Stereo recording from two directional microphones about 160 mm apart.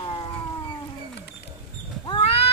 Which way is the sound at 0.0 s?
30° left (ahead or behind).